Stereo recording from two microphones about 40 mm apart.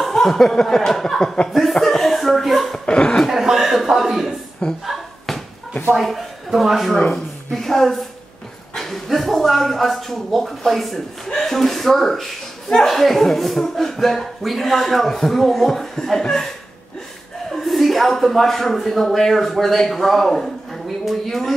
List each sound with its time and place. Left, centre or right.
0.0 s chuckle: centre
1.2 s speech: left
1.5 s chuckle: centre
2.8 s chuckle: left
3.3 s chuckle: centre
4.8 s a sound: centre
5.9 s a man's voice: centre
7.5 s a man's voice: centre
11.2 s speech: centre
11.5 s speech: centre
12.8 s speech: centre
17.5 s a man's voice: centre